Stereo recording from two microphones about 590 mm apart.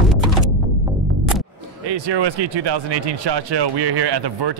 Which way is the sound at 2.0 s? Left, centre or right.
Right.